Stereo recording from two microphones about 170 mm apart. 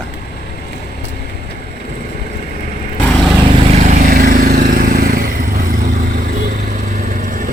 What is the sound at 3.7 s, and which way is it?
Vehicle, 45° right (ahead or behind).